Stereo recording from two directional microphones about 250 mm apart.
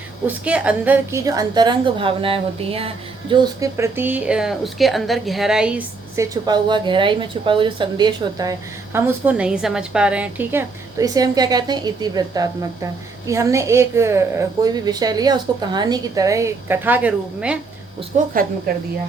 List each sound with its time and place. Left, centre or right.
0.3 s a woman's voice: centre
18.1 s a woman's voice: right